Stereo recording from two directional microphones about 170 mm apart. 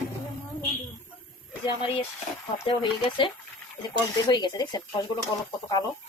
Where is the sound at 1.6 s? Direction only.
30° left (ahead or behind).